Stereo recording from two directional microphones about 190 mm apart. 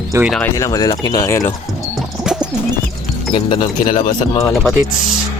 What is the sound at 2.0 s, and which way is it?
Bird, 5° right (ahead or behind).